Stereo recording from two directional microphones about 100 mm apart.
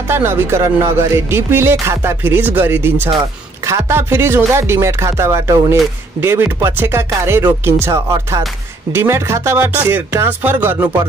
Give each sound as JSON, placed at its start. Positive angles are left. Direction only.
{"t": 0.1, "sound": "speech", "side_deg": -25}